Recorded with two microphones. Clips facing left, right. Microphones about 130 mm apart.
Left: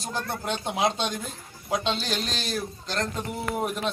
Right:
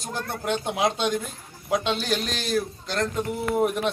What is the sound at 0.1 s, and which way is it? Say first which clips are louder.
Speech: right 3 dB; 10° right (ahead or behind).